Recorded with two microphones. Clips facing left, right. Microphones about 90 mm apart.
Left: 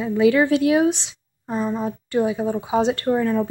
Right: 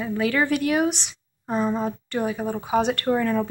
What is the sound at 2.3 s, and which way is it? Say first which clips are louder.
Speech: left 3 dB; 15° left (ahead or behind).